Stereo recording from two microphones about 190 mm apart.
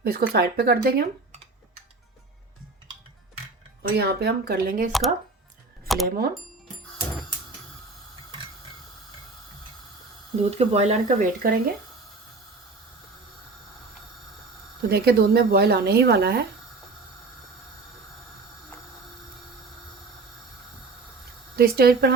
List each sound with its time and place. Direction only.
0.0 s speech: 55° right (ahead or behind)
3.9 s speech: 55° right (ahead or behind)
4.9 s speech: centre (ahead or behind)
6.1 s speech: 50° right (ahead or behind)
10.5 s speech: 35° right (ahead or behind)
14.8 s speech: 55° right (ahead or behind)
21.5 s speech: 55° right (ahead or behind)